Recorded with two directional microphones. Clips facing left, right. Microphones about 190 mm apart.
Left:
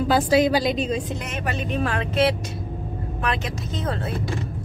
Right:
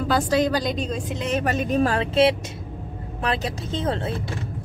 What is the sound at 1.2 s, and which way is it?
A woman's voice, 40° right (ahead or behind).